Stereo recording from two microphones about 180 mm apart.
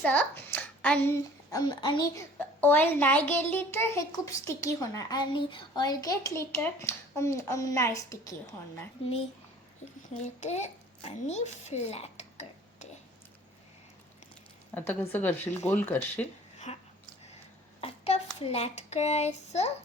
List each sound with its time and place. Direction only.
0.0 s hands: 10° left (ahead or behind)
1.5 s a child's voice: 20° left (ahead or behind)
2.6 s a woman's voice: 10° left (ahead or behind)
10.2 s a child's voice: 40° left (ahead or behind)
14.8 s a woman's voice: 10° left (ahead or behind)
16.7 s a sound: 35° left (ahead or behind)
17.7 s a child's voice: 35° left (ahead or behind)